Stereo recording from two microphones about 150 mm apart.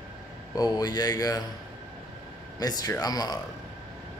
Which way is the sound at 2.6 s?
25° left (ahead or behind).